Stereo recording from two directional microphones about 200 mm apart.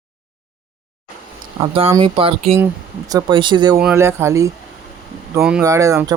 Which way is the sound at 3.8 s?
10° right (ahead or behind).